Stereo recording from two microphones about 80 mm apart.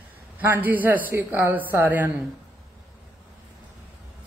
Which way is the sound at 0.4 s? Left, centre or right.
Right.